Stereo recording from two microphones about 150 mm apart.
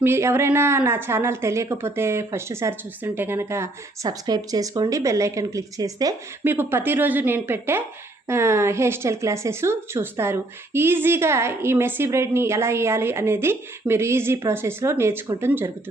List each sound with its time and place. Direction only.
0.0 s speech: 15° right (ahead or behind)